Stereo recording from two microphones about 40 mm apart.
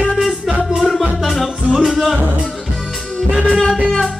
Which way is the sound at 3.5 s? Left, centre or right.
Centre.